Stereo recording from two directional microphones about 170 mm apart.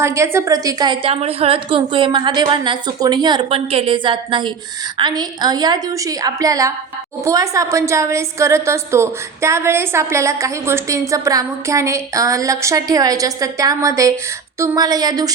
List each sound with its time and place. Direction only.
0.0 s a woman's voice: 15° right (ahead or behind)